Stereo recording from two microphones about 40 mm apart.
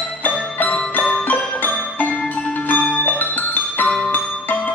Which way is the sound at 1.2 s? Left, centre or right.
Left.